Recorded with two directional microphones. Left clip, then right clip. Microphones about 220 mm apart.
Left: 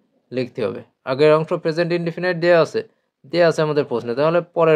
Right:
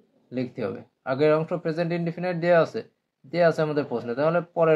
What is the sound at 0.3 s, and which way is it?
Speech, 35° left (ahead or behind).